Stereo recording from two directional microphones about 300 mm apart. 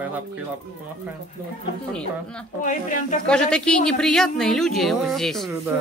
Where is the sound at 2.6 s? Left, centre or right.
Left.